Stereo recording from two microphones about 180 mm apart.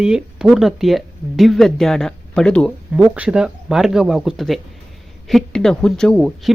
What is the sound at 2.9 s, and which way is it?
Speech, 5° right (ahead or behind).